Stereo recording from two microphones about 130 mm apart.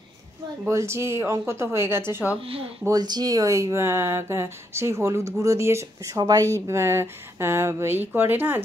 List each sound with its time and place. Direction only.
0.7 s speech: 20° right (ahead or behind)
2.4 s speech: 50° right (ahead or behind)
2.8 s speech: 30° right (ahead or behind)